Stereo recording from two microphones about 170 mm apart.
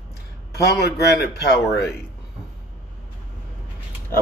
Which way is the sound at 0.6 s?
75° left (ahead or behind).